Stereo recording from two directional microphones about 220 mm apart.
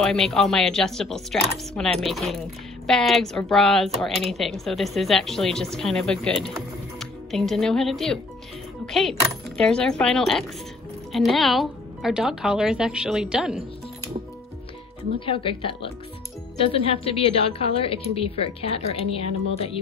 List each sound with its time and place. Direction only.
0.0 s speech: centre (ahead or behind)
15.1 s speech: 25° left (ahead or behind)